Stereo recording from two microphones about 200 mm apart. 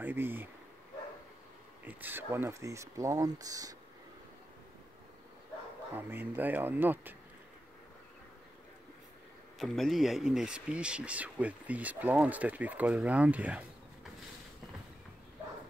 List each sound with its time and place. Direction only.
0.0 s speech: 10° right (ahead or behind)
1.9 s speech: 10° right (ahead or behind)
5.9 s speech: 10° right (ahead or behind)
9.6 s speech: centre (ahead or behind)